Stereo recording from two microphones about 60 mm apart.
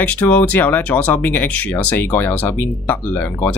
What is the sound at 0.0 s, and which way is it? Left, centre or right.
Speech, left.